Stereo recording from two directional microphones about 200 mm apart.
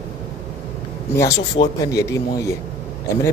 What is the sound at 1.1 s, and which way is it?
A man's voice, 15° left (ahead or behind).